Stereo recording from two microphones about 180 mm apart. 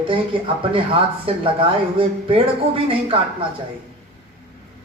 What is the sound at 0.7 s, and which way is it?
Speech, 30° right (ahead or behind).